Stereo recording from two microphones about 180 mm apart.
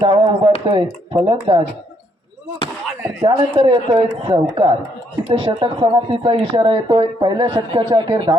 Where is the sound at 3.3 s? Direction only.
30° right (ahead or behind).